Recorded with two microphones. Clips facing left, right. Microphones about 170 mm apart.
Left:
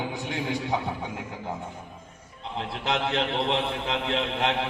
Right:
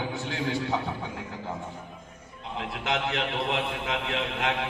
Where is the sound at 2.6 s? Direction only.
30° left (ahead or behind).